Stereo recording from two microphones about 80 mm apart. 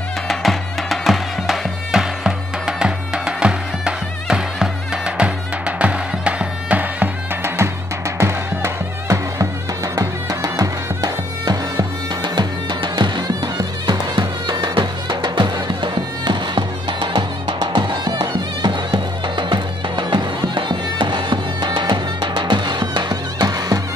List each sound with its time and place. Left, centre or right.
0.3 s music: centre; by 7.5 s right
8.2 s music: right
12.2 s music: right